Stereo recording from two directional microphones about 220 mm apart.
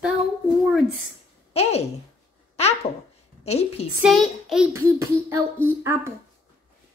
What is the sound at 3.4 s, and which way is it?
Speech, 30° left (ahead or behind).